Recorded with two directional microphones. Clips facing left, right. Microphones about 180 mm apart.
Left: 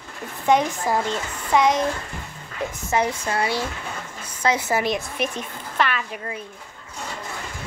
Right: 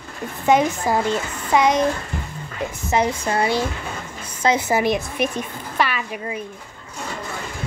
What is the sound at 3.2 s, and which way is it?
A woman's voice, 25° right (ahead or behind).